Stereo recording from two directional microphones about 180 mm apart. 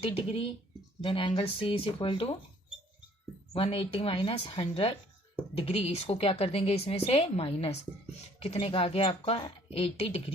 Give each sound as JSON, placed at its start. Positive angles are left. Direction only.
{"t": 0.0, "sound": "a woman's voice", "side_deg": 30}
{"t": 3.5, "sound": "a woman's voice", "side_deg": 30}